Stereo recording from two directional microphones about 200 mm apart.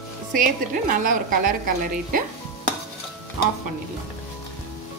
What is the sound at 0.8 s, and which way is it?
Speech, 45° right (ahead or behind).